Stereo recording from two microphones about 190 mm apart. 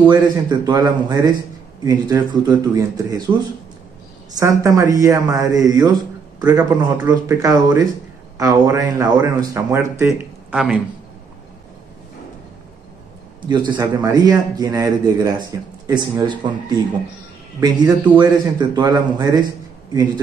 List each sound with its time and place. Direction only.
0.1 s a man's voice: 20° right (ahead or behind)
4.4 s a man's voice: 15° right (ahead or behind)
13.5 s a man's voice: 20° right (ahead or behind)